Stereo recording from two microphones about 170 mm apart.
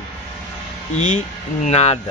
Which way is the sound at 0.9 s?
45° left (ahead or behind).